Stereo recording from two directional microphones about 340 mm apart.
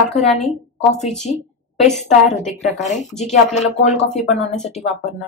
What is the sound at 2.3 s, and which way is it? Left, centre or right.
Speech, centre.